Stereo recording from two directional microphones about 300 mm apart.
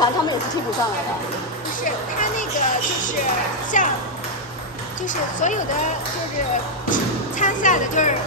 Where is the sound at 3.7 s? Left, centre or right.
Left.